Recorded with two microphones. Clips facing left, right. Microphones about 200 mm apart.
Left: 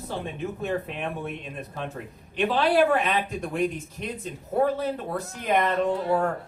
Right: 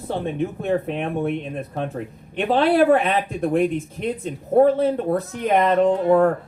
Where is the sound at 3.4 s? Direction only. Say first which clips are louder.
Right 7 dB; 55° right (ahead or behind).